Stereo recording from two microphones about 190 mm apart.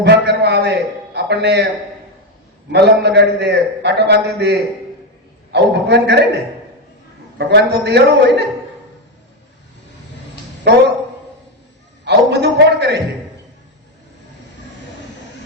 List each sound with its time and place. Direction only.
0.0 s a sound: 60° right (ahead or behind)
1.1 s music: 60° right (ahead or behind)
2.7 s a man's voice: 60° right (ahead or behind)
7.3 s a man's voice: 60° right (ahead or behind)
12.0 s a man's voice: 60° right (ahead or behind)